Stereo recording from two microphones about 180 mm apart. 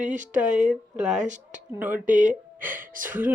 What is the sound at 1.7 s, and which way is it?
Speech, 10° right (ahead or behind).